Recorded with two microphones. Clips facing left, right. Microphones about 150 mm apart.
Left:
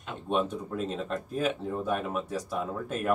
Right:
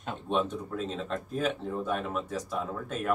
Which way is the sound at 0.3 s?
10° left (ahead or behind).